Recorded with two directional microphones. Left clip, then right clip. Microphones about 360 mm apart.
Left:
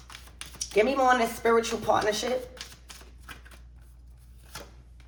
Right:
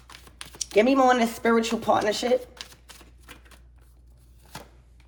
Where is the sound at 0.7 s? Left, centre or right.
Right.